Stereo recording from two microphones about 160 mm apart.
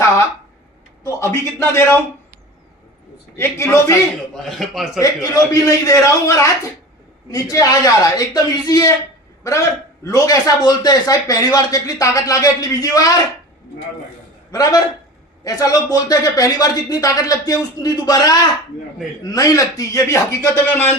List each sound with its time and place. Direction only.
1.0 s a man's voice: 15° left (ahead or behind)
3.3 s a man's voice: 15° left (ahead or behind)
4.4 s a man's voice: centre (ahead or behind)
4.9 s a man's voice: 20° left (ahead or behind)
14.5 s a man's voice: 20° left (ahead or behind)